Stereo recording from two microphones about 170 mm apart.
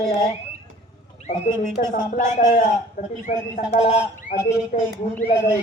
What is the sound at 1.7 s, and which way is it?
Speech, 50° left (ahead or behind).